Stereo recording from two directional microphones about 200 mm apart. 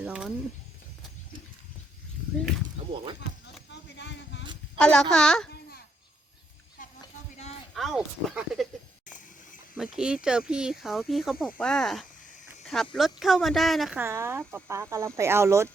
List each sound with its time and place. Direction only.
0.0 s a sound: 5° right (ahead or behind)
3.7 s a sound: 60° left (ahead or behind)
4.8 s speech: 5° left (ahead or behind)
7.7 s speech: centre (ahead or behind)
9.7 s speech: 5° right (ahead or behind)
14.0 s speech: 15° right (ahead or behind)